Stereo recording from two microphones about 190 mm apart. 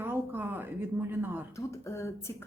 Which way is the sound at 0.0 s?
10° right (ahead or behind).